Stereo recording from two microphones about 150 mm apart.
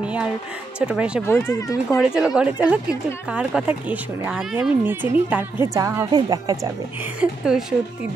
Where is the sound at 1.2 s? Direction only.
15° left (ahead or behind).